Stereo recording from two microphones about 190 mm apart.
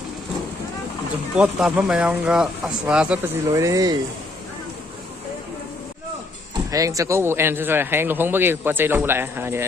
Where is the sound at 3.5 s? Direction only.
15° right (ahead or behind).